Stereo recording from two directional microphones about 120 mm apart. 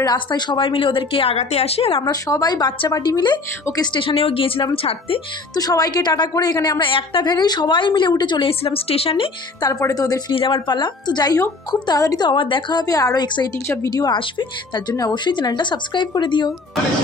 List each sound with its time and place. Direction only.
0.0 s a woman's voice: 35° left (ahead or behind)
2.0 s a woman's voice: 30° left (ahead or behind); by 4.6 s 50° left (ahead or behind)
5.6 s a woman's voice: 30° left (ahead or behind); by 9.3 s 50° left (ahead or behind)
9.6 s a woman's voice: 30° left (ahead or behind)
10.3 s a woman's voice: 45° left (ahead or behind)